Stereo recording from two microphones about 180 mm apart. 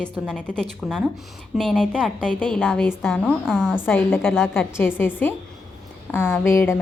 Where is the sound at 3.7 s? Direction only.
10° left (ahead or behind).